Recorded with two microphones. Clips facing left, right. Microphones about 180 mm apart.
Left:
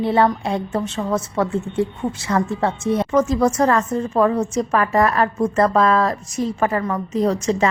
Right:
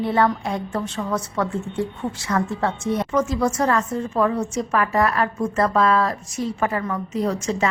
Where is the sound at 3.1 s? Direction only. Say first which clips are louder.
Left 5 dB; 45° left (ahead or behind).